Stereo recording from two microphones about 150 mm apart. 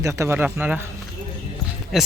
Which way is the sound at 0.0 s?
20° right (ahead or behind).